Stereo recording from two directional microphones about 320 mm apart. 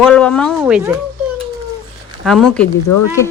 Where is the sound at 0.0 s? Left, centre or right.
Centre.